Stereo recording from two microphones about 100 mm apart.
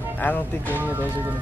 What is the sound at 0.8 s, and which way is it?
Speech, 20° right (ahead or behind).